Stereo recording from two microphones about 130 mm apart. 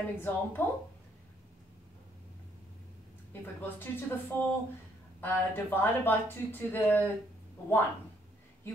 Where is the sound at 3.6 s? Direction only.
15° left (ahead or behind).